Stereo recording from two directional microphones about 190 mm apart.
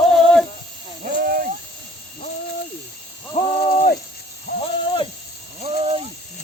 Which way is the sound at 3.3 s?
30° left (ahead or behind).